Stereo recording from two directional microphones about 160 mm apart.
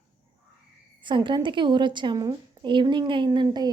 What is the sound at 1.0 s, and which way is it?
A woman's voice, 30° right (ahead or behind).